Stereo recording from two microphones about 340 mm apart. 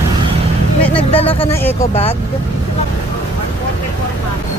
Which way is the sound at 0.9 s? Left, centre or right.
Centre.